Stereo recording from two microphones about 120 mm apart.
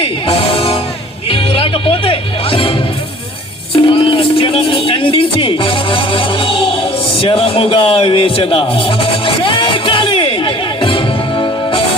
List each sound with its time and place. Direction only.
0.0 s music: 50° left (ahead or behind)
3.8 s a man's voice: 45° left (ahead or behind)
9.2 s music: 45° left (ahead or behind)